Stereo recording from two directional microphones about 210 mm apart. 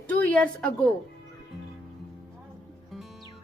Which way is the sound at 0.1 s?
5° left (ahead or behind).